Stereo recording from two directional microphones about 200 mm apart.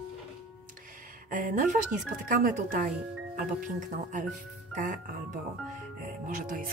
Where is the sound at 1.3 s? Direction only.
40° right (ahead or behind).